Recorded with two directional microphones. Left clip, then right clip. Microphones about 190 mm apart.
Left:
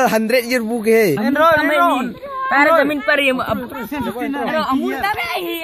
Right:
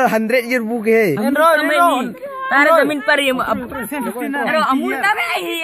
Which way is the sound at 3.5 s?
35° right (ahead or behind).